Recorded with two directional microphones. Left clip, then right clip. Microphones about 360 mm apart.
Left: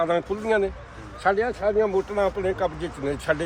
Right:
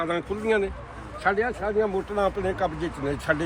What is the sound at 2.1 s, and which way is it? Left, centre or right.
Speech, centre.